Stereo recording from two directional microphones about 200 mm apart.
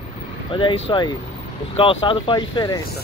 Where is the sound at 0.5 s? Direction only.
25° left (ahead or behind).